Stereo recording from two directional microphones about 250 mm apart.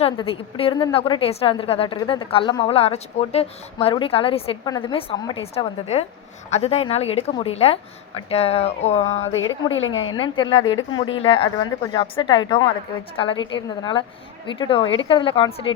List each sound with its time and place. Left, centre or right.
0.0 s a woman's voice: left
9.4 s a woman's voice: left
10.2 s a woman's voice: centre